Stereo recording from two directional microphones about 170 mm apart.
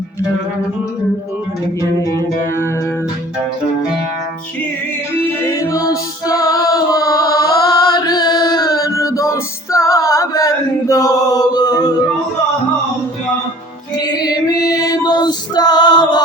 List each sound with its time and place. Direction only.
2.0 s music: 15° left (ahead or behind)
5.5 s music: 20° left (ahead or behind)
13.9 s female singing: 25° left (ahead or behind)